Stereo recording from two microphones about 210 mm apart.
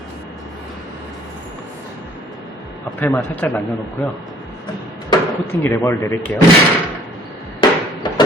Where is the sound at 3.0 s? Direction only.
10° left (ahead or behind).